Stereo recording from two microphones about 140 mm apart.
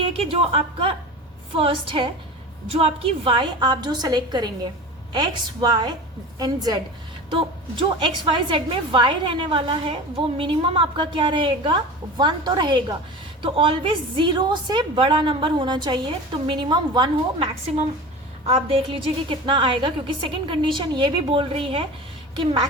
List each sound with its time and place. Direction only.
0.0 s a woman's voice: 45° right (ahead or behind)